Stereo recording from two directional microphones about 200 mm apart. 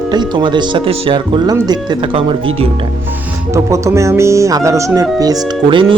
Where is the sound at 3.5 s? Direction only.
15° right (ahead or behind).